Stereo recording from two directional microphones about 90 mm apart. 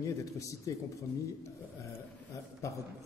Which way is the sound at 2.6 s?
35° left (ahead or behind).